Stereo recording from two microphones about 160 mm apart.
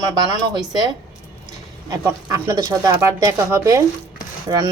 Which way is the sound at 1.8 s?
20° right (ahead or behind).